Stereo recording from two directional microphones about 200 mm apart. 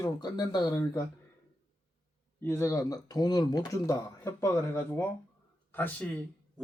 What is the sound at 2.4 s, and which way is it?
Speech, 10° left (ahead or behind).